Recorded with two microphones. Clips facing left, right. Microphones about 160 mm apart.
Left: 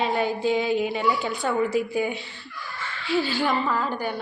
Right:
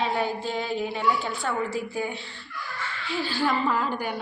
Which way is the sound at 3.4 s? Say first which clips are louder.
Even; 10° right (ahead or behind).